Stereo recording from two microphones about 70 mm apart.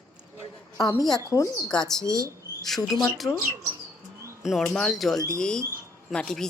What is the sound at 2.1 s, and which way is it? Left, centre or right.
Mouse, right.